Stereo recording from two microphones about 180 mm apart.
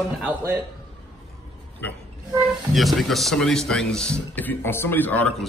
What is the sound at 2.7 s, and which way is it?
Speech, centre (ahead or behind).